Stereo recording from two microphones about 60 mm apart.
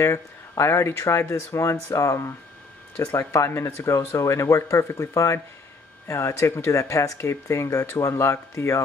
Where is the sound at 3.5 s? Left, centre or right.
Left.